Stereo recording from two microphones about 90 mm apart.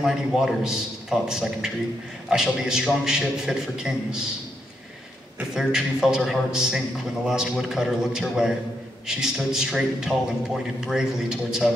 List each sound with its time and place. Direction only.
0.0 s a man's voice: 5° right (ahead or behind)
5.5 s a man's voice: 5° right (ahead or behind)